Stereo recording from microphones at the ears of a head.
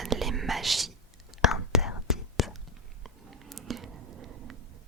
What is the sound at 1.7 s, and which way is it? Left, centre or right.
Whispering, left.